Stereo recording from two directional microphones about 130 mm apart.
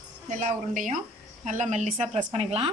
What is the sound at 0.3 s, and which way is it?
Speech, 80° right.